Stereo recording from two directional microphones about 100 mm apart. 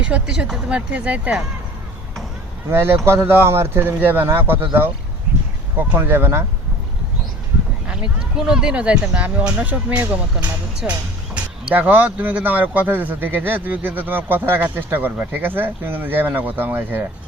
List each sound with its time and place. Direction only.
0.0 s speech: 10° right (ahead or behind)
2.6 s speech: 25° right (ahead or behind)
7.9 s speech: 10° right (ahead or behind)